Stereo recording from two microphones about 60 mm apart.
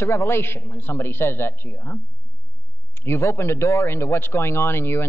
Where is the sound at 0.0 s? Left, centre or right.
Left.